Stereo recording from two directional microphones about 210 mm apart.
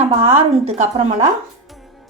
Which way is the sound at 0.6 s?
30° right (ahead or behind).